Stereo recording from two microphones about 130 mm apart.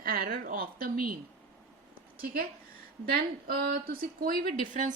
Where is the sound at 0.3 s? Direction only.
90° right.